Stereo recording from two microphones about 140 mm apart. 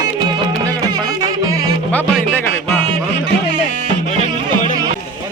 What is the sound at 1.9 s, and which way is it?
Music, 10° left (ahead or behind).